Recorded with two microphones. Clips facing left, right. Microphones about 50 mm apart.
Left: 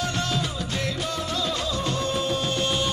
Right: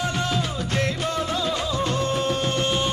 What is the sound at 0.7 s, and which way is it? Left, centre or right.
Music, right.